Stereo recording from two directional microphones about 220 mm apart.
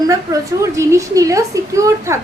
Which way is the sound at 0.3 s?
15° right (ahead or behind).